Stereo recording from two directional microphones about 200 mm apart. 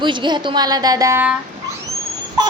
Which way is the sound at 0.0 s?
25° right (ahead or behind).